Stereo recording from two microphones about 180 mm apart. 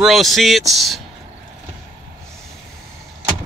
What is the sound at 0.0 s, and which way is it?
Speech, centre (ahead or behind).